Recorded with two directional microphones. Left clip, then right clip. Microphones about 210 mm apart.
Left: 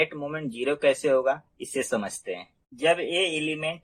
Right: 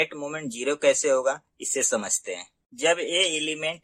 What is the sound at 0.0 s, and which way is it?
Speech, 35° right (ahead or behind).